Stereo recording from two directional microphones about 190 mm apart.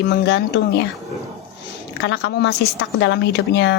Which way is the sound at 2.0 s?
65° left (ahead or behind).